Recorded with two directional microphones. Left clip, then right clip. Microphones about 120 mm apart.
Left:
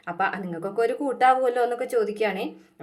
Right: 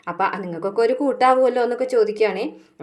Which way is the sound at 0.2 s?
25° right (ahead or behind).